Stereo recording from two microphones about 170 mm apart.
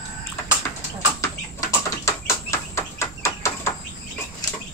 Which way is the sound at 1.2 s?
20° left (ahead or behind).